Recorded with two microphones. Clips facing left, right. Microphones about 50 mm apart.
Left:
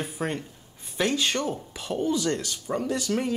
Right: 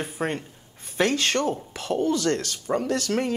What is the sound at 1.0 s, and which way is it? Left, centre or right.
Speech, right.